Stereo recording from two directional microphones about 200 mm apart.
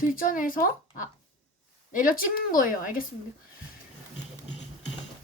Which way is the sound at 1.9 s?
45° left (ahead or behind).